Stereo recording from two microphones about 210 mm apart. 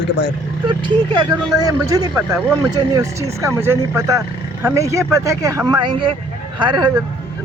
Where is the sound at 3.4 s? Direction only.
15° right (ahead or behind).